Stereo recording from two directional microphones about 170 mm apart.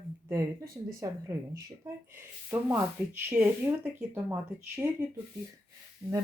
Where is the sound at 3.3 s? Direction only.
10° right (ahead or behind).